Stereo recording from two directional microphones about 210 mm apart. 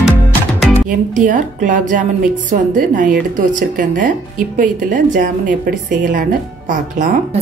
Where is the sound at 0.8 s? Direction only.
40° right (ahead or behind).